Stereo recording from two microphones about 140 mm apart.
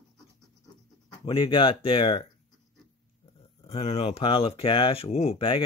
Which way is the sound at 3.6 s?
45° left (ahead or behind).